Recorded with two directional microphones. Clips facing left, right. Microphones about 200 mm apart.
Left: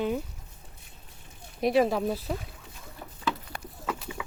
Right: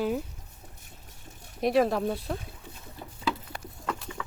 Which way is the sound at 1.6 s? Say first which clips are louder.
Even; centre (ahead or behind).